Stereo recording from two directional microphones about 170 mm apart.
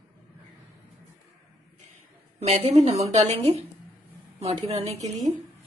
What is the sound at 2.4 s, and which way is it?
A woman's voice, 35° right (ahead or behind).